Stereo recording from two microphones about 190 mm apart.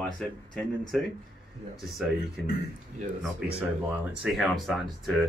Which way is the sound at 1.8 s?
Centre (ahead or behind).